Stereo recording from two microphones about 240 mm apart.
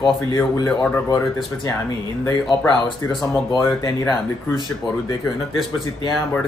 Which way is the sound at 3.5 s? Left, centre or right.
Centre.